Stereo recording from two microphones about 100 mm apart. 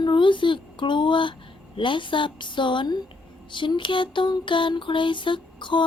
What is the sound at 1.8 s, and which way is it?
Mantra, 55° left (ahead or behind).